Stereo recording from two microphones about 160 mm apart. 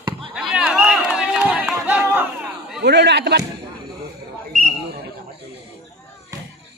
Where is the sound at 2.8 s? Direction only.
90° right.